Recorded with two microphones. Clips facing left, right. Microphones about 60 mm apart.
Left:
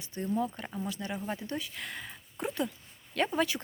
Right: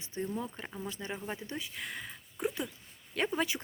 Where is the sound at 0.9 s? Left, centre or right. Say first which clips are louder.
Left 2 dB; right.